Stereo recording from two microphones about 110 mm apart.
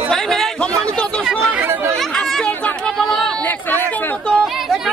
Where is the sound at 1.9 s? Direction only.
5° left (ahead or behind).